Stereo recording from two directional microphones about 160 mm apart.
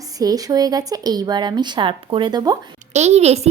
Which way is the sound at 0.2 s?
25° right (ahead or behind).